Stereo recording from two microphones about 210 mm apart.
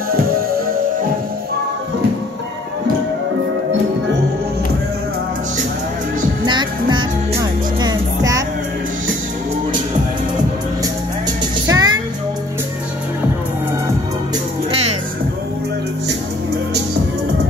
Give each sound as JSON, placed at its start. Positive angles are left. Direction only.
{"t": 6.4, "sound": "music", "side_deg": -20}
{"t": 11.6, "sound": "music", "side_deg": -15}